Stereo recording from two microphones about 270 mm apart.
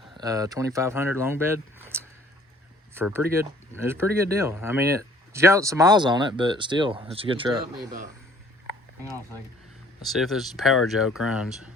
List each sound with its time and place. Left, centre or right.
0.2 s speech: centre
10.1 s speech: centre